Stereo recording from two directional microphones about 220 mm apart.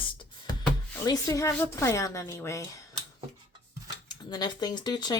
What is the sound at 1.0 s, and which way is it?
Speech, 15° left (ahead or behind).